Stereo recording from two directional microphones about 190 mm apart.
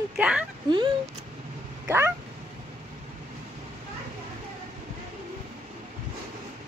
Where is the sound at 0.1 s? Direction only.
5° right (ahead or behind).